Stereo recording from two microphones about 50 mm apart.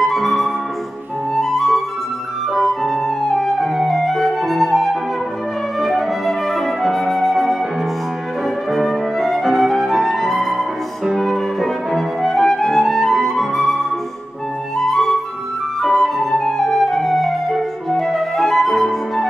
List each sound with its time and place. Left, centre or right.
0.0 s flute: centre
1.3 s music: centre
2.8 s music: centre
5.8 s flute: centre
8.7 s music: centre
14.9 s flute: centre